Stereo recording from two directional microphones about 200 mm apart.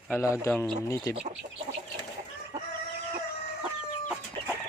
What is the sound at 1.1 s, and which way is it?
Speech, 35° right (ahead or behind).